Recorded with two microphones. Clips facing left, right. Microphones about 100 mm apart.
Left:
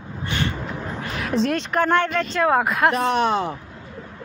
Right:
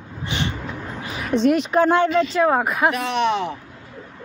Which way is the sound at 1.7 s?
15° right (ahead or behind).